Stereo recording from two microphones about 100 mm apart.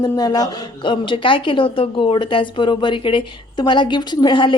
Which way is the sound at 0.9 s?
55° left (ahead or behind).